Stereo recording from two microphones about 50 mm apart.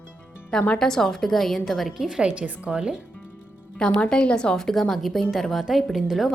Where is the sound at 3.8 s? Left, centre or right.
Centre.